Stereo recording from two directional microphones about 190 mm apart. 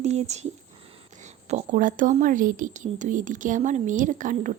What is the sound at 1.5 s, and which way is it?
A woman's voice, 45° right (ahead or behind).